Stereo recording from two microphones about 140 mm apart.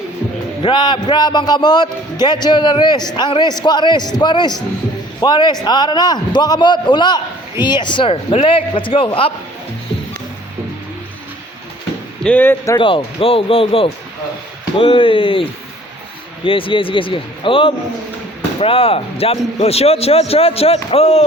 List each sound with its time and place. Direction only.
0.6 s a man's voice: 35° left (ahead or behind)
12.2 s speech: 10° left (ahead or behind)
12.8 s a man's voice: 40° left (ahead or behind)